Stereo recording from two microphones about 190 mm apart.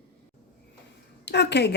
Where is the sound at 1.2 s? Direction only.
65° left (ahead or behind).